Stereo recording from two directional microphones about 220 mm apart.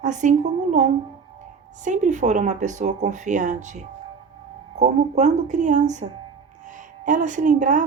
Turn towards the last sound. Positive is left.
turn(degrees=-35)  # may be behind; listen again after turning